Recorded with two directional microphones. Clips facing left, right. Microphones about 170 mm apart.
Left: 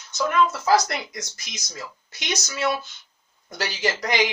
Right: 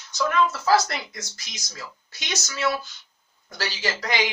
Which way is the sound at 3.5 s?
20° left (ahead or behind).